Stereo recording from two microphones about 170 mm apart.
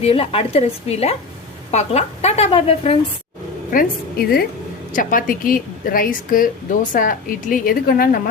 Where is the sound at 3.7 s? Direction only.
60° left (ahead or behind).